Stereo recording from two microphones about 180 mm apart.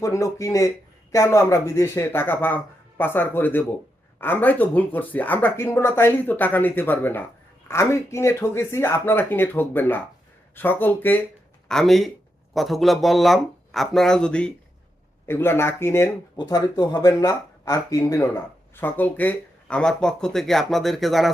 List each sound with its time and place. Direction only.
0.0 s speech: 15° left (ahead or behind); by 21.3 s centre (ahead or behind)